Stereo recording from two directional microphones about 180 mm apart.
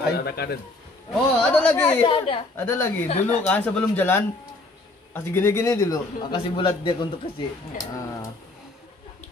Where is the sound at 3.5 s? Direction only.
5° left (ahead or behind).